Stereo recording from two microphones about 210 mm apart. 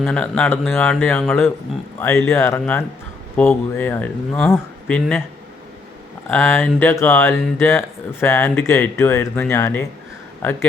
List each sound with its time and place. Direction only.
0.0 s speech: 5° left (ahead or behind)
6.2 s speech: 10° left (ahead or behind)